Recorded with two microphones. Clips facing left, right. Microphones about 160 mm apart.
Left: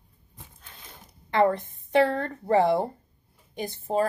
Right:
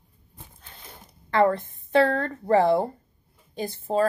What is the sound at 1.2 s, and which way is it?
A woman's voice, 20° left (ahead or behind).